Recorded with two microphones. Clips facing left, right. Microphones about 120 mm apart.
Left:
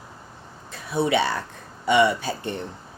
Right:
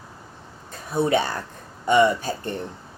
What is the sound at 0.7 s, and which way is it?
Speech, 45° right (ahead or behind).